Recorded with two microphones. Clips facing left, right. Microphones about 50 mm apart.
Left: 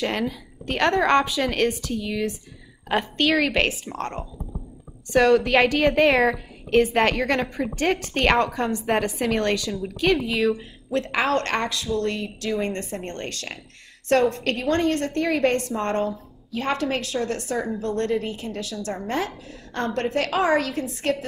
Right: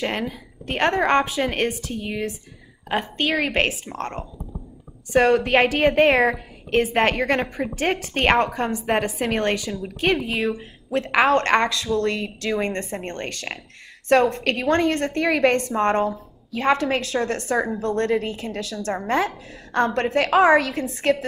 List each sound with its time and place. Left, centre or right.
0.0 s a woman's voice: right
3.4 s a woman's voice: right
5.1 s a woman's voice: right
7.4 s a woman's voice: centre
7.8 s a woman's voice: right
9.1 s a woman's voice: right
10.6 s a woman's voice: right